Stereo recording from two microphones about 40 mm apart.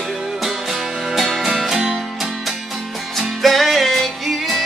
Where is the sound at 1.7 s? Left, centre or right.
Centre.